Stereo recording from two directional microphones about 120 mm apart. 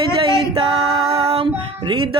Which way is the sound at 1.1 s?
55° right (ahead or behind).